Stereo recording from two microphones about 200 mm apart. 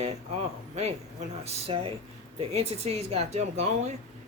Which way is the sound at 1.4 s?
30° right (ahead or behind).